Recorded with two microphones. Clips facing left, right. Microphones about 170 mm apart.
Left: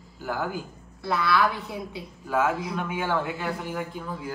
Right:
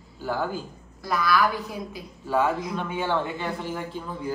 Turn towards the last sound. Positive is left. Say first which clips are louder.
# right 1 dB
turn(degrees=5)  # may be behind; listen again after turning